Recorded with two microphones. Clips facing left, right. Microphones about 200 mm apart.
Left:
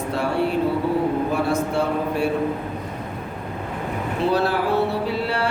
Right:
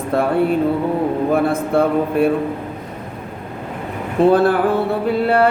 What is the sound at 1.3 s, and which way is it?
Speech, 55° right (ahead or behind).